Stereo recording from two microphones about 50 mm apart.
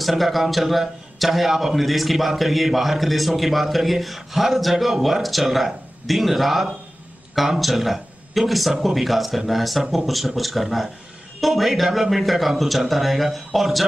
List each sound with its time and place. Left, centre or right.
0.0 s a man's voice: centre